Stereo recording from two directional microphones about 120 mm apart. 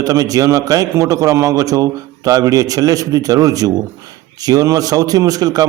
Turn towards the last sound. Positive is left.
turn(degrees=-30)  # may be behind; listen again after turning